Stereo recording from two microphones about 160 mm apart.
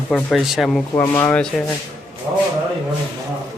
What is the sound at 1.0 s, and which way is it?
Speech, 10° left (ahead or behind).